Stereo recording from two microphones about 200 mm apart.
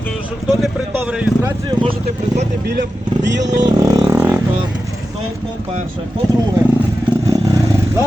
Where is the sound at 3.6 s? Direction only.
15° right (ahead or behind).